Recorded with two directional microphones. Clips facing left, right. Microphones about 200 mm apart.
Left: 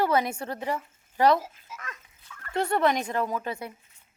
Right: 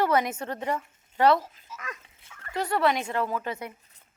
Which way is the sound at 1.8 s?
20° right (ahead or behind).